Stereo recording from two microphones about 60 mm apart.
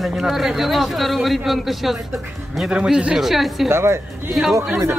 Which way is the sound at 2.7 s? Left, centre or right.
Centre.